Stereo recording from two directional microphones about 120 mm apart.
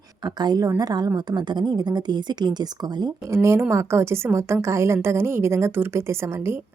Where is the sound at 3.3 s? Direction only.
20° right (ahead or behind).